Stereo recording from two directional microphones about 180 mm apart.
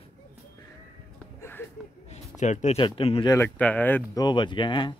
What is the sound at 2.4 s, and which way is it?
Speech, 40° left (ahead or behind).